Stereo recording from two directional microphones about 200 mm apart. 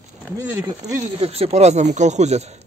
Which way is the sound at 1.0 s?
30° right (ahead or behind).